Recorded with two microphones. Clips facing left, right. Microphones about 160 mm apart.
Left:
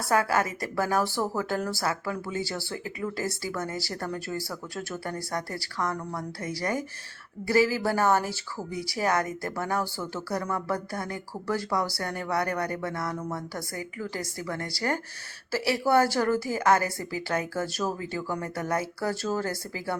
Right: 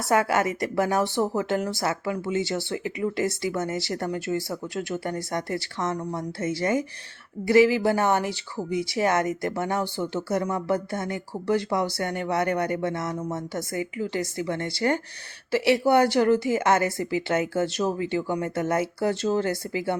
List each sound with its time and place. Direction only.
0.1 s speech: 25° right (ahead or behind)